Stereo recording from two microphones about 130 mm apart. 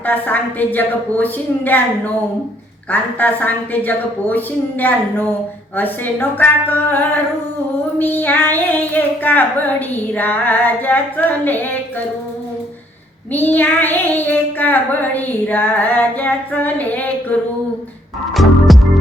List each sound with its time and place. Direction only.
0.0 s child singing: 15° left (ahead or behind)
2.9 s child singing: 15° left (ahead or behind)
13.3 s child singing: 15° left (ahead or behind)
18.3 s music: centre (ahead or behind)